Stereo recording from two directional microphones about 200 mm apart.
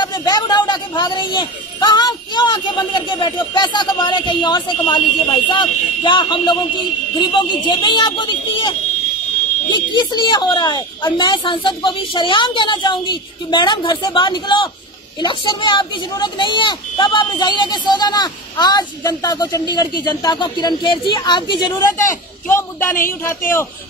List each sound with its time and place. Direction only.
0.0 s a woman's voice: 20° left (ahead or behind)
22.5 s a man's voice: 10° left (ahead or behind)